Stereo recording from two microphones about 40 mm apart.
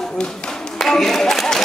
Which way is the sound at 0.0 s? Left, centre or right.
Centre.